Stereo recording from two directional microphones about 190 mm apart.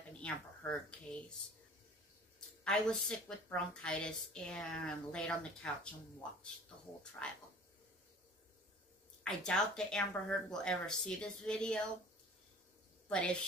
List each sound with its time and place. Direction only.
0.2 s speech: 5° left (ahead or behind)
2.6 s a woman's voice: 5° left (ahead or behind)
9.2 s a woman's voice: 5° left (ahead or behind)
13.1 s a woman's voice: 5° left (ahead or behind)